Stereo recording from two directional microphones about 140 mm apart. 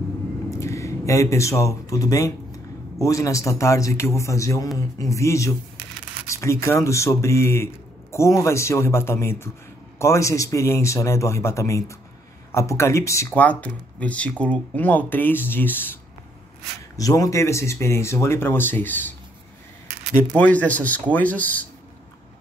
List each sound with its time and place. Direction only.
0.5 s speech: 20° left (ahead or behind)
16.9 s speech: 25° left (ahead or behind)
20.2 s speech: 10° left (ahead or behind)